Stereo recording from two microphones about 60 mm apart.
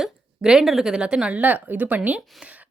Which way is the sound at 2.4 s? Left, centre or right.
Centre.